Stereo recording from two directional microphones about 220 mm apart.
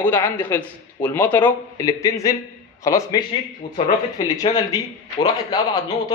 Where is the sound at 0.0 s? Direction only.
10° left (ahead or behind).